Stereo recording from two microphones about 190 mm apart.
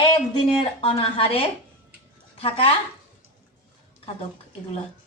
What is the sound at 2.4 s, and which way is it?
Speech, 30° left (ahead or behind).